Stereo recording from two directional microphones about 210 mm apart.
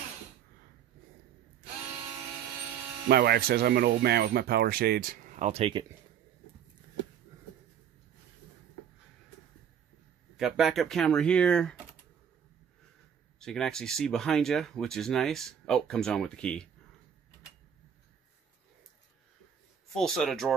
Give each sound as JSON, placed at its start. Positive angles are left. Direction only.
{"t": 3.1, "sound": "speech", "side_deg": -50}
{"t": 10.3, "sound": "speech", "side_deg": 0}
{"t": 13.4, "sound": "speech", "side_deg": 5}
{"t": 20.0, "sound": "speech", "side_deg": 0}